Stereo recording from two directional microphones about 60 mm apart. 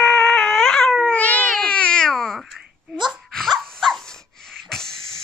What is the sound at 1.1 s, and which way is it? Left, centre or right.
Cat, left.